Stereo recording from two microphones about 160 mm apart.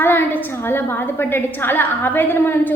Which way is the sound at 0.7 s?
15° left (ahead or behind).